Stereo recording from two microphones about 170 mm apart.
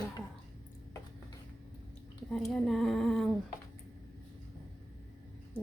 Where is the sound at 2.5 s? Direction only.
Centre (ahead or behind).